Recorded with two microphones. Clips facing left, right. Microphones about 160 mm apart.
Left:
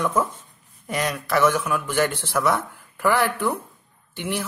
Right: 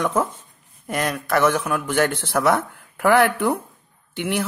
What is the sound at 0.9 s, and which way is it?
A man's voice, 50° right (ahead or behind).